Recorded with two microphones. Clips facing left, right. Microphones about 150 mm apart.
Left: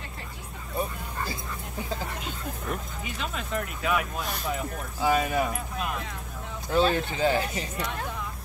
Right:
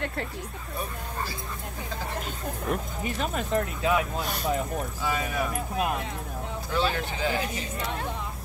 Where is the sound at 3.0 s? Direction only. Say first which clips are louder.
Right 5 dB; 45° right (ahead or behind); by 4.2 s 25° right (ahead or behind).